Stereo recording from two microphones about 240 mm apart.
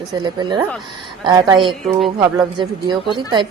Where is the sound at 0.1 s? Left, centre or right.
Centre.